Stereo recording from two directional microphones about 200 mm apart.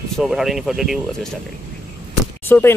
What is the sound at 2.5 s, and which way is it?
Speech, 10° left (ahead or behind).